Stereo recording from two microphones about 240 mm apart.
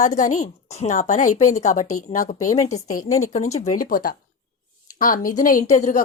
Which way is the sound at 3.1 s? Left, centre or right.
Left.